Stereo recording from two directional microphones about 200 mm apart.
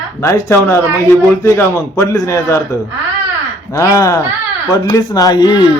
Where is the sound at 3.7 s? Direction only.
15° left (ahead or behind).